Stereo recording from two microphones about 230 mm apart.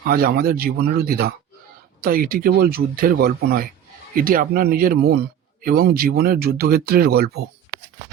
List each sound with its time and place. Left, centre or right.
0.0 s a man's voice: right